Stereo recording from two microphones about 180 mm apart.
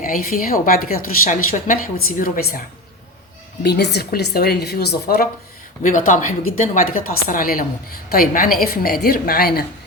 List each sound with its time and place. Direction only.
0.0 s a woman's voice: 50° left (ahead or behind)
3.6 s a woman's voice: 65° left (ahead or behind)
5.8 s a woman's voice: 45° left (ahead or behind)